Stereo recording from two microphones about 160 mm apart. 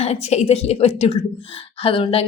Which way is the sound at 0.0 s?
40° left (ahead or behind).